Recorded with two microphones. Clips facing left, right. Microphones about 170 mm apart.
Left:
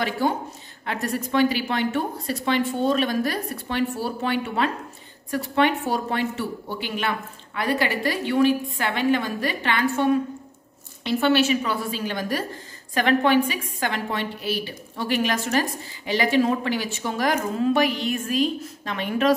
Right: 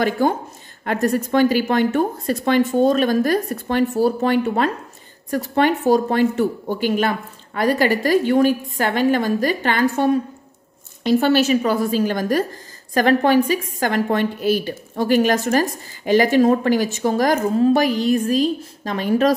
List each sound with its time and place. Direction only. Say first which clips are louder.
0.2 s a woman's voice: right 5 dB; 50° right (ahead or behind)